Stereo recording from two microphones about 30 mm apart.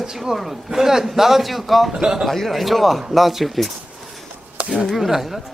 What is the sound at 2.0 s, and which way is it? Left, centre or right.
Speech, right.